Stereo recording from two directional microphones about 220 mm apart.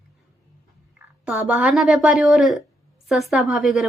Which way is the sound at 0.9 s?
5° right (ahead or behind).